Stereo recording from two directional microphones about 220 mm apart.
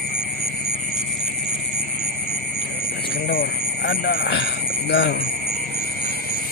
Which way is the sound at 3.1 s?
45° left (ahead or behind).